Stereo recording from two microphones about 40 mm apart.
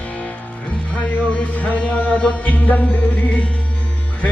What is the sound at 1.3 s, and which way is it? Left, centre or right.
Music, left.